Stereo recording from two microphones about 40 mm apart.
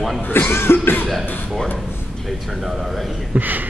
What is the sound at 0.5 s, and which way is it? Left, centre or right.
Cough, left.